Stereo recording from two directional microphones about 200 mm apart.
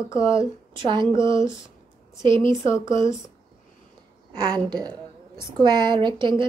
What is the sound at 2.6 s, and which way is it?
Speech, 15° left (ahead or behind).